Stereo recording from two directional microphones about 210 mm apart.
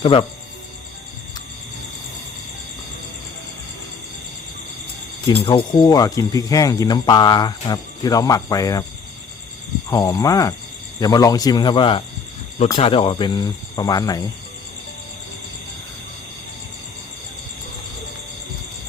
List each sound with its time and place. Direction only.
0.0 s speech: 25° left (ahead or behind)
5.3 s speech: 25° left (ahead or behind)
9.9 s speech: 15° left (ahead or behind)